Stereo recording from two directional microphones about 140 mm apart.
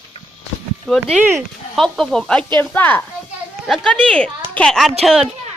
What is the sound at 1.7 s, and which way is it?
A man's voice, centre (ahead or behind).